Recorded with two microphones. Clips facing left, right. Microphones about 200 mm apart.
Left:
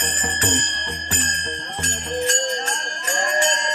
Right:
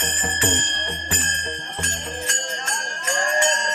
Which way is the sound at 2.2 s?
35° left (ahead or behind).